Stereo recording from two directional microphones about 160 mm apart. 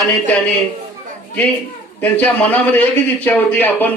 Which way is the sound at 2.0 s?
10° left (ahead or behind).